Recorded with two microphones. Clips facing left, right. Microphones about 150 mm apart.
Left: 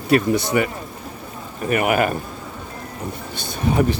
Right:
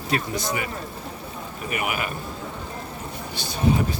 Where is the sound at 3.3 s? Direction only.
50° left (ahead or behind).